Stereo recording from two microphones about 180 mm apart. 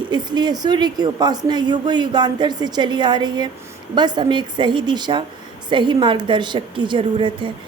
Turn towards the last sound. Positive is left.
turn(degrees=-25)  # may be behind; listen again after turning